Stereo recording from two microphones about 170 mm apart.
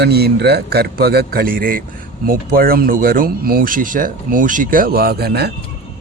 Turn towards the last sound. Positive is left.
turn(degrees=-70)  # may be behind; listen again after turning